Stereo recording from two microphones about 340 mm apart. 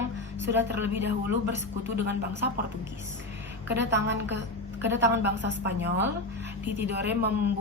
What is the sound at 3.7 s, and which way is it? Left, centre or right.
A woman's voice, right.